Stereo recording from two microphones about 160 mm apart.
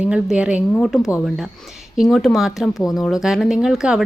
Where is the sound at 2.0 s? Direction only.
Centre (ahead or behind).